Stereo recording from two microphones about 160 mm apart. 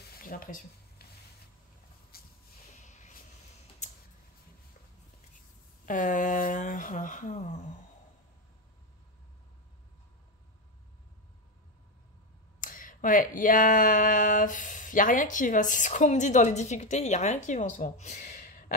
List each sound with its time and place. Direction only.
0.2 s speech: 65° left (ahead or behind)
2.1 s hiss: 70° left (ahead or behind)
2.8 s a sound: 50° left (ahead or behind)
5.9 s speech: 55° left (ahead or behind)
12.5 s speech: 60° left (ahead or behind)